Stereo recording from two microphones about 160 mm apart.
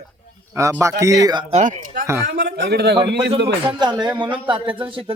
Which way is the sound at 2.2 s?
75° right (ahead or behind).